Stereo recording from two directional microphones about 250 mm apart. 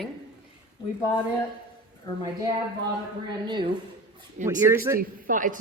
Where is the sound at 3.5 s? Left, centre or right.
Centre.